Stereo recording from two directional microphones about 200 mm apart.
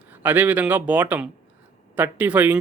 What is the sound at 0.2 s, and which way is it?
Speech, 10° right (ahead or behind).